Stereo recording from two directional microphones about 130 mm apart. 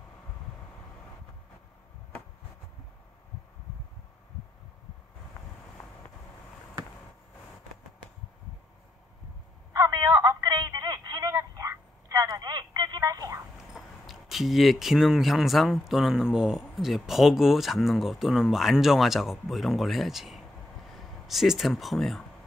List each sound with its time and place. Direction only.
9.8 s telephone: 30° right (ahead or behind)
13.7 s speech: centre (ahead or behind)